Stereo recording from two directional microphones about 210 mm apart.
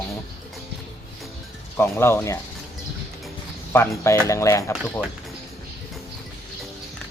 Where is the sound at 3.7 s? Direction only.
15° left (ahead or behind).